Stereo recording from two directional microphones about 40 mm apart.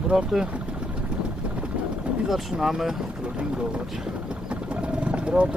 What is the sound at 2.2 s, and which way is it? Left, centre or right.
Speech, centre.